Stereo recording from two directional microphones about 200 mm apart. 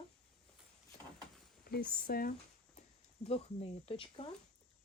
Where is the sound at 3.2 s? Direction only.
30° left (ahead or behind).